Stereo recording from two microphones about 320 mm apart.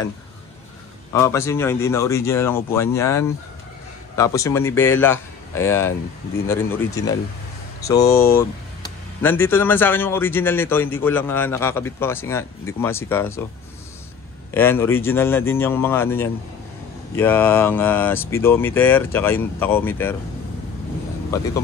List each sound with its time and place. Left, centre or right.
1.1 s a man's voice: centre
8.1 s speech: left
9.2 s a man's voice: centre
14.5 s a man's voice: centre